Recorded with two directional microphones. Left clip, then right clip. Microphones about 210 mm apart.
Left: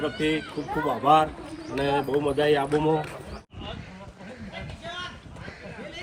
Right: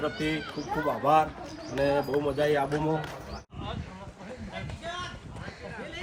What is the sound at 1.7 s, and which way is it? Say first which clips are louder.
Speech: left 1 dB; 10° right (ahead or behind).